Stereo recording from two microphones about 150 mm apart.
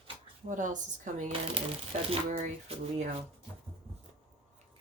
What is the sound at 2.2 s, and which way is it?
Speech, 50° right (ahead or behind).